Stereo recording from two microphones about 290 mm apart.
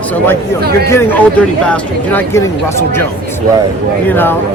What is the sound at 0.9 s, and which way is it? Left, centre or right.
Speech, centre.